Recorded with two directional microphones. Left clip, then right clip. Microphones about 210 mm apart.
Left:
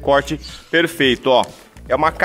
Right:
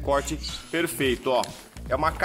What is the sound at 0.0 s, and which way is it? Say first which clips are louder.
Speech: left 9 dB; 45° left (ahead or behind).